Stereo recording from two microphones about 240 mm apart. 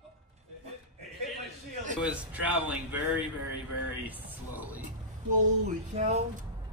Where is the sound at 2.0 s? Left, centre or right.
Centre.